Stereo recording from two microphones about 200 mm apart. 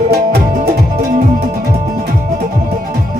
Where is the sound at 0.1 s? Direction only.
50° right (ahead or behind).